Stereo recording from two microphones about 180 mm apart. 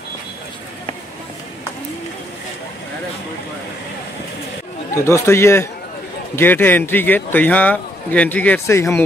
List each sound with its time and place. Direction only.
4.9 s a man's voice: 15° left (ahead or behind)